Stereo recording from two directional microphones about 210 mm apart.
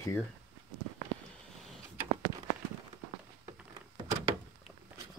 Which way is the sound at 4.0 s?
25° right (ahead or behind).